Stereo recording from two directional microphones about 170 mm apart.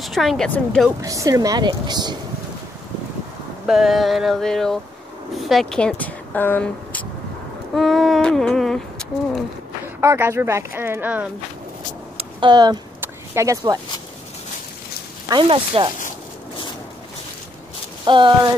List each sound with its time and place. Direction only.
0.0 s a sound: centre (ahead or behind)
1.0 s speech: 20° right (ahead or behind)
3.6 s a sound: centre (ahead or behind)
5.3 s speech: centre (ahead or behind)
7.7 s humming: centre (ahead or behind)
9.9 s speech: 15° right (ahead or behind)
12.2 s a sound: 25° right (ahead or behind)
15.2 s speech: 30° right (ahead or behind)
18.0 s speech: 30° right (ahead or behind)